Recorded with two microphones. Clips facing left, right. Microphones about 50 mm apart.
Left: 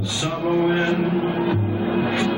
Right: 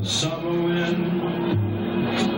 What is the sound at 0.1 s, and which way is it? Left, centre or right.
Music, left.